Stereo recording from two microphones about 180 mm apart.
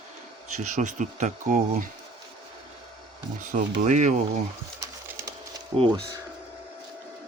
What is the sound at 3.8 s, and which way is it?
Speech, 40° right (ahead or behind).